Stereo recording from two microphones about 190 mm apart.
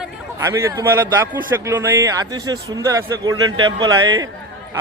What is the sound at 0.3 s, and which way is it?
Speech, 15° right (ahead or behind).